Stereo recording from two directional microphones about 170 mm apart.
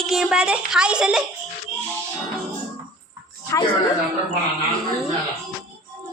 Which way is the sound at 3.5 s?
15° left (ahead or behind).